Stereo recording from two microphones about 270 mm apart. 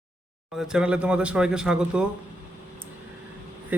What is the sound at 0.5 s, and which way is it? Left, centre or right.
A man's voice, centre.